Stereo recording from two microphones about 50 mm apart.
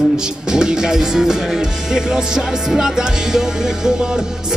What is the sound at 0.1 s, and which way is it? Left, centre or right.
Speech, centre.